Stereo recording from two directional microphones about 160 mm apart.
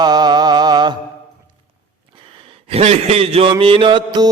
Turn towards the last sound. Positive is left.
turn(degrees=-30)  # may be behind; listen again after turning